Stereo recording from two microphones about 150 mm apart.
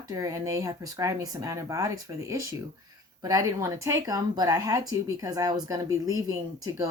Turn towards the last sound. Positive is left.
turn(degrees=-25)  # may be behind; listen again after turning